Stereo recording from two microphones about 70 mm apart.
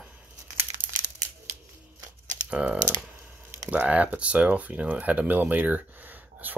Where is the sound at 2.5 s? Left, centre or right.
Centre.